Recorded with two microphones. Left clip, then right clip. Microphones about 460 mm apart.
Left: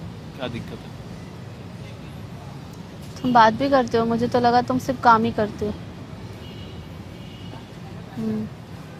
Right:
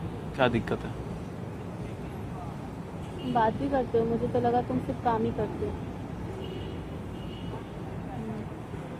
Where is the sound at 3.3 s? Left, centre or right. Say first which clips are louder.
Left 11 dB; left.